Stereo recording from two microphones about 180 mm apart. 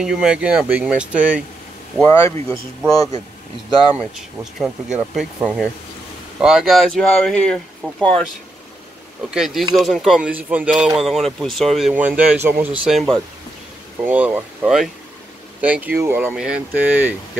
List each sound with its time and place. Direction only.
0.0 s speech: 5° right (ahead or behind)
2.0 s speech: 15° left (ahead or behind)
2.8 s speech: centre (ahead or behind)
4.6 s speech: 5° right (ahead or behind)
9.3 s speech: centre (ahead or behind)